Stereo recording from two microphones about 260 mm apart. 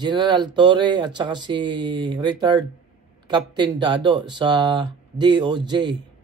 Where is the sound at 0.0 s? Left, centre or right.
Centre.